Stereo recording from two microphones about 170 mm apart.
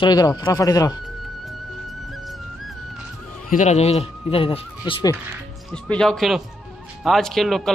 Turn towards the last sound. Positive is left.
turn(degrees=0)  # may be behind; listen again after turning